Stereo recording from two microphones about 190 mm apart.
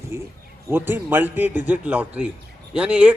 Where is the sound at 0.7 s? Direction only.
10° right (ahead or behind).